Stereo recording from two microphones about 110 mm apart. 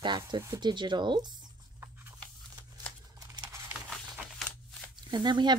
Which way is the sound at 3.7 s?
10° right (ahead or behind).